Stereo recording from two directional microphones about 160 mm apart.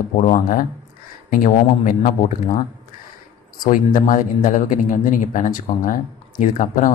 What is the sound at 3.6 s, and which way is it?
Speech, 60° left (ahead or behind).